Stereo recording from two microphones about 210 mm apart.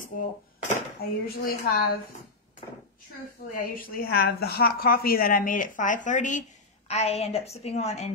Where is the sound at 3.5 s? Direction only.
40° left (ahead or behind).